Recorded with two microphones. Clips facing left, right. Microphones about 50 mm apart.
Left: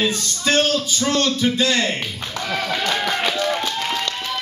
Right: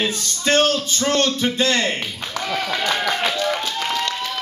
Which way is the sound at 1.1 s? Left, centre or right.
Right.